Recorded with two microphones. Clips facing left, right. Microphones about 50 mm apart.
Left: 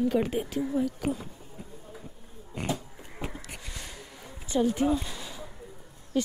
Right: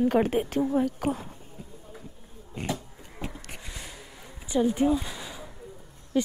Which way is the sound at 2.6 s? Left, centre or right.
Left.